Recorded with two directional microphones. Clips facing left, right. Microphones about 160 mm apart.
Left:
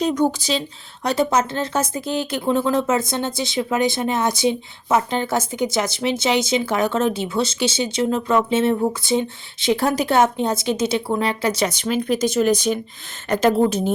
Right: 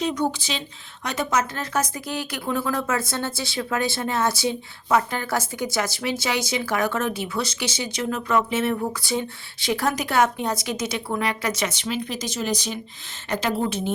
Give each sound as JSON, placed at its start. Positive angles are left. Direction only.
{"t": 0.0, "sound": "a woman's voice", "side_deg": 45}